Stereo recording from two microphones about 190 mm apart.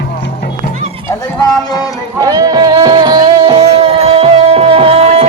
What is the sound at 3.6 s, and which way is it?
Music, 35° right (ahead or behind).